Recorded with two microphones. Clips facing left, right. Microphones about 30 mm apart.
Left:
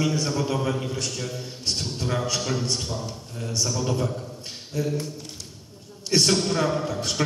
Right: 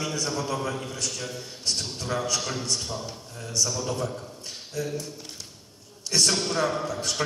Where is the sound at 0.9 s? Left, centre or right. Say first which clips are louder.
Left 2 dB; left.